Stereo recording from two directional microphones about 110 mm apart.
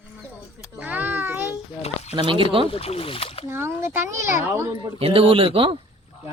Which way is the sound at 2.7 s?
65° left (ahead or behind).